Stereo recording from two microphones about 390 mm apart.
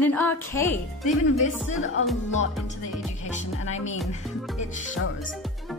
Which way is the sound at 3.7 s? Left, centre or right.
Centre.